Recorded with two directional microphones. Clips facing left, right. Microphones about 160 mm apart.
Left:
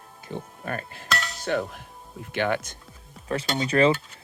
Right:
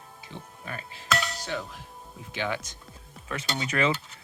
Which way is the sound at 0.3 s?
50° left (ahead or behind).